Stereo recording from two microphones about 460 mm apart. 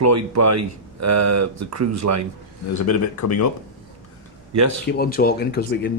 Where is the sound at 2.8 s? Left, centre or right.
Left.